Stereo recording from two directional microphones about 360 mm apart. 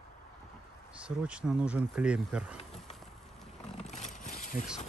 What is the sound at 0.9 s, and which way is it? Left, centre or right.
Speech, centre.